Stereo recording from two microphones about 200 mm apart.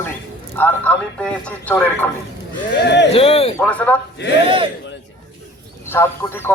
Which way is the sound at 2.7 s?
60° left (ahead or behind).